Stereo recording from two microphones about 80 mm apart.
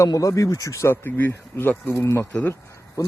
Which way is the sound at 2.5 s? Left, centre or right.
Left.